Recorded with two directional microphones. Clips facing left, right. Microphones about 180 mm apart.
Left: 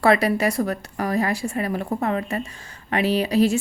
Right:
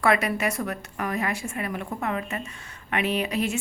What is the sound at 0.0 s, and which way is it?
A woman's voice, 35° left (ahead or behind).